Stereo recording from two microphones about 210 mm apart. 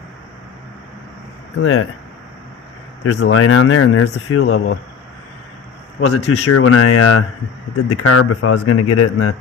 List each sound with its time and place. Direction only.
1.6 s speech: 90° left
3.0 s speech: 90° left
6.0 s speech: 90° left